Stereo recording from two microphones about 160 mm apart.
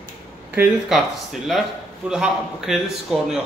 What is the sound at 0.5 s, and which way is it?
Speech, 10° right (ahead or behind).